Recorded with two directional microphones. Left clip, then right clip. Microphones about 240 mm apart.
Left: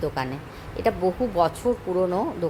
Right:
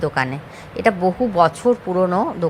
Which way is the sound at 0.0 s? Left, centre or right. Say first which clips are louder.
Right 7 dB; centre.